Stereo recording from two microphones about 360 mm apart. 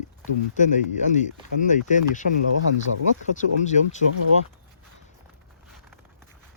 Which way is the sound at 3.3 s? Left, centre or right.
Centre.